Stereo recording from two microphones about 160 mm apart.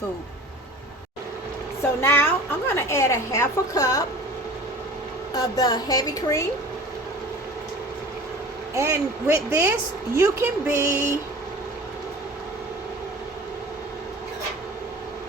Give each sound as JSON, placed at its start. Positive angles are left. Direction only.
{"t": 1.8, "sound": "a woman's voice", "side_deg": 15}
{"t": 5.4, "sound": "a woman's voice", "side_deg": 25}
{"t": 8.7, "sound": "speech", "side_deg": -15}